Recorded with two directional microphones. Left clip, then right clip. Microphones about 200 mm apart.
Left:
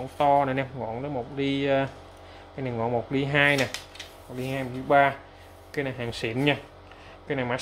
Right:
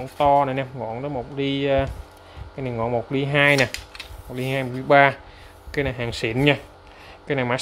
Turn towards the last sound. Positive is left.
turn(degrees=-40)  # may be behind; listen again after turning